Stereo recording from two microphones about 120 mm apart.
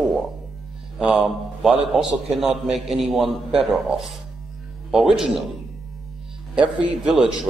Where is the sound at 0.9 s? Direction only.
10° right (ahead or behind).